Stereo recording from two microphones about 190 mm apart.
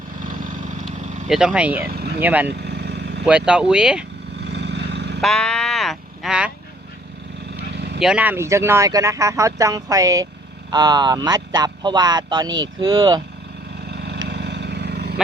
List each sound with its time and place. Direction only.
0.9 s vehicle: 5° right (ahead or behind)
1.8 s speech: 55° right (ahead or behind)
2.2 s speech: 10° right (ahead or behind)
2.5 s vehicle: 60° right (ahead or behind)
3.2 s speech: 5° right (ahead or behind)
4.4 s vehicle: 65° right (ahead or behind)
5.2 s speech: 5° left (ahead or behind)
7.7 s vehicle: 60° right (ahead or behind)
8.0 s a man's voice: 5° right (ahead or behind)
13.9 s vehicle: 60° right (ahead or behind)